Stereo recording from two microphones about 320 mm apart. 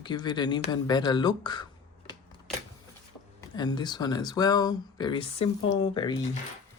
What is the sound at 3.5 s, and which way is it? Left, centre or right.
Speech, centre.